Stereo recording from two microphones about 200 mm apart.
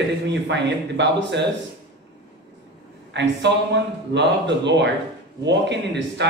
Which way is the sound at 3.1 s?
60° right (ahead or behind).